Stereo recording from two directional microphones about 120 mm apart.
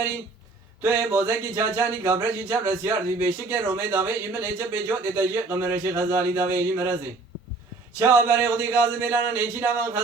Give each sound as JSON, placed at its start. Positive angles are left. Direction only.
{"t": 0.8, "sound": "a man's voice", "side_deg": -15}
{"t": 7.9, "sound": "a man's voice", "side_deg": -20}